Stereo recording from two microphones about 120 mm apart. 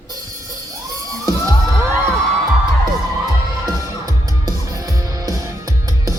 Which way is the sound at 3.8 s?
30° right (ahead or behind).